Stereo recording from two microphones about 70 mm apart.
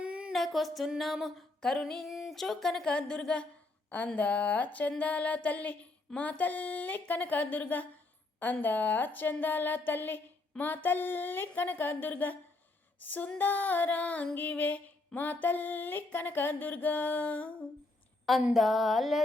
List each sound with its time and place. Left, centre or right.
0.0 s a sound: centre
0.3 s female singing: centre
3.8 s music: centre
18.5 s female singing: centre